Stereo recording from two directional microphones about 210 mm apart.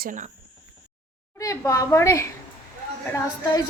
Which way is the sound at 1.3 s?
15° left (ahead or behind).